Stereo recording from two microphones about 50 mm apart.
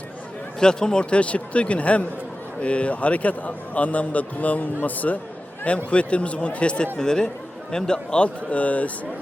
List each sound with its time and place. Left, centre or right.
0.6 s a man's voice: centre